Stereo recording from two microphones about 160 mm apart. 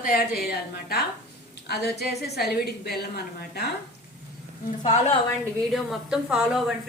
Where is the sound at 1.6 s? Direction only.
90° left.